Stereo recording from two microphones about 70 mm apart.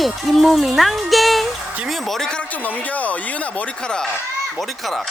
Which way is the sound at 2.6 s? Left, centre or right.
Left.